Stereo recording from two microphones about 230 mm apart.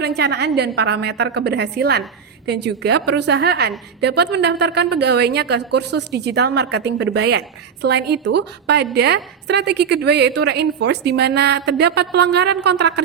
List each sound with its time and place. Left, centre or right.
0.0 s a woman's voice: right